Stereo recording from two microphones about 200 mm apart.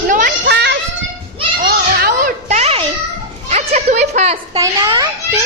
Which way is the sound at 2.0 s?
40° right (ahead or behind).